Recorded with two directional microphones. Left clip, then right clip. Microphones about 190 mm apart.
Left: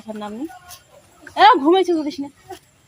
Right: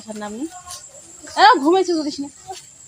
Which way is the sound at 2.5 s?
15° left (ahead or behind).